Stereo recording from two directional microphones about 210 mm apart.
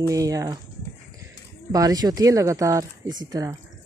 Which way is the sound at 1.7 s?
15° right (ahead or behind).